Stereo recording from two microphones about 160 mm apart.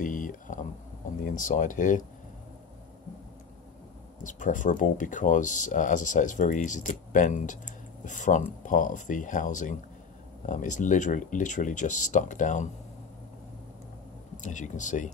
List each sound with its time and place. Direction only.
0.0 s a sound: 55° left (ahead or behind)
1.2 s speech: 55° left (ahead or behind)
4.2 s speech: 55° left (ahead or behind)
14.4 s speech: 50° left (ahead or behind)